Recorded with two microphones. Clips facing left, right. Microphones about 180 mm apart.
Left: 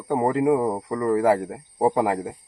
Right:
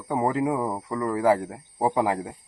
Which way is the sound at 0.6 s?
15° left (ahead or behind).